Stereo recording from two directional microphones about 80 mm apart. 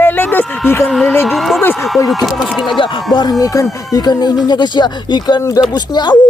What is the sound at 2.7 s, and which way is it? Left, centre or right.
Speech, left.